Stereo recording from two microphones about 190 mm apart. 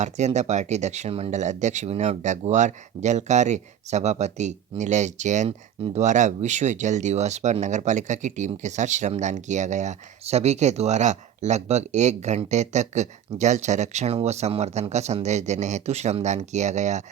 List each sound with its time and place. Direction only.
0.0 s speech: 35° right (ahead or behind)